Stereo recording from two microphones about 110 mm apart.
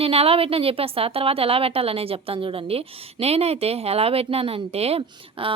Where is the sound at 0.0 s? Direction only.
65° right (ahead or behind).